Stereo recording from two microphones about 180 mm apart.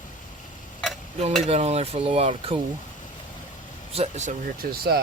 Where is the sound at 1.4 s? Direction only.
35° right (ahead or behind).